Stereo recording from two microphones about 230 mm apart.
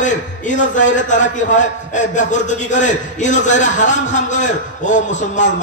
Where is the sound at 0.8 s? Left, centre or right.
Left.